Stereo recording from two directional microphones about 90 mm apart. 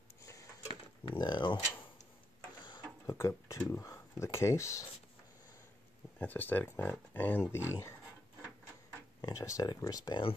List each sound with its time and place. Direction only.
0.2 s a sound: 35° left (ahead or behind)
1.0 s speech: 55° left (ahead or behind)
3.1 s speech: 35° left (ahead or behind)
6.1 s speech: 20° left (ahead or behind)
9.2 s speech: 40° left (ahead or behind)